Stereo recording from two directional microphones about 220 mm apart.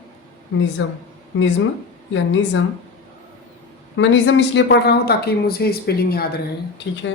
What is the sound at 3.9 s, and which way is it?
Speech, 55° left (ahead or behind).